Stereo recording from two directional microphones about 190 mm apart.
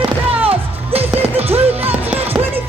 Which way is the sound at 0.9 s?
30° right (ahead or behind).